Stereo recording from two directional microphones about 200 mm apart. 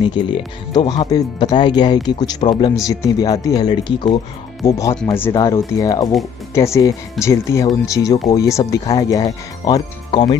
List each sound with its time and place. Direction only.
0.0 s speech: 25° left (ahead or behind)